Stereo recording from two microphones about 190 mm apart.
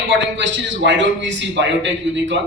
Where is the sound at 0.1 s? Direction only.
70° right (ahead or behind).